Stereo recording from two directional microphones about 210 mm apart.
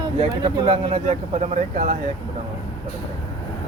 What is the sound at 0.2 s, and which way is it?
Speech, 25° right (ahead or behind).